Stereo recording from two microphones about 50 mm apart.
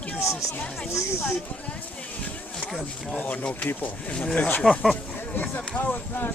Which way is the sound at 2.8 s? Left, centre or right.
Left.